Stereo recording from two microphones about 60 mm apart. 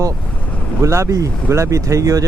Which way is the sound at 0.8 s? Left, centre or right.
Right.